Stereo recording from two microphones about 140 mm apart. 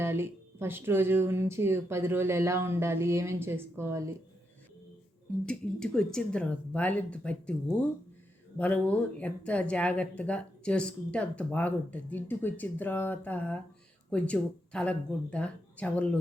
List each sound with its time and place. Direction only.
0.0 s speech: 15° right (ahead or behind)
5.5 s speech: 5° left (ahead or behind)